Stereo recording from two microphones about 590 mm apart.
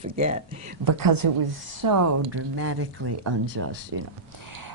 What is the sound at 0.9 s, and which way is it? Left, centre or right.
A woman's voice, right.